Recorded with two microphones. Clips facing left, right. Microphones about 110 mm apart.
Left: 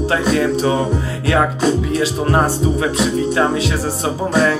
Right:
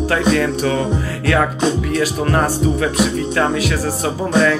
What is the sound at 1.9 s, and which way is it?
Speech, 25° left (ahead or behind).